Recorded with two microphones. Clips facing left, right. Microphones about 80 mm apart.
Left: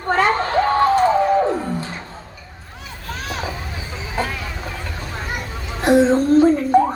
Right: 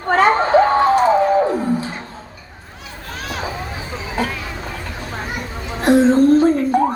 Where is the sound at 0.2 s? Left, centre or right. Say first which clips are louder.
Right 6 dB; right.